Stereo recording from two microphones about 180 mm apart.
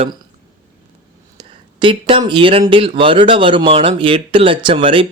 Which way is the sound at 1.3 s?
25° right (ahead or behind).